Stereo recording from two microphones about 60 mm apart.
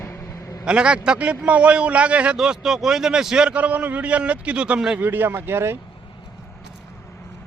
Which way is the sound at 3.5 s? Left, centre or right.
Right.